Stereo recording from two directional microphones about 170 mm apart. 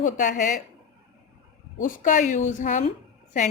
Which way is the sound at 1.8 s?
50° left (ahead or behind).